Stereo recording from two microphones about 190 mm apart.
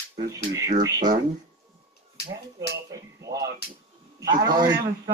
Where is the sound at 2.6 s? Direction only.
15° right (ahead or behind).